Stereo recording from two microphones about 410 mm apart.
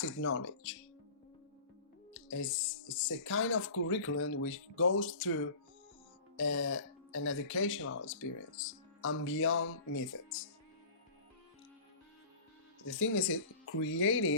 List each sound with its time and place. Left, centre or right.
0.0 s speech: left
2.1 s speech: left
12.9 s speech: left